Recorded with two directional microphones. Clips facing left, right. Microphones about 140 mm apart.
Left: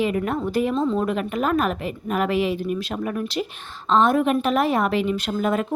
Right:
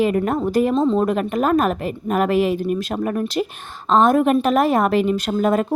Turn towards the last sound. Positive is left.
turn(degrees=-40)  # may be behind; listen again after turning